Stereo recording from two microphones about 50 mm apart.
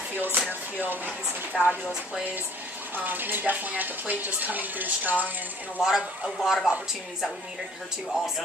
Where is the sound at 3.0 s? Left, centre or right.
Right.